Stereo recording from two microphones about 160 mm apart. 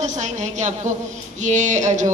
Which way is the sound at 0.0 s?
45° right (ahead or behind).